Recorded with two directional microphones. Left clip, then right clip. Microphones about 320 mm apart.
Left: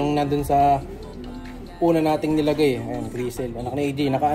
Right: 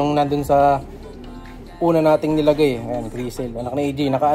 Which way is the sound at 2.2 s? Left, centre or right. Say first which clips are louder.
Right 4 dB; right.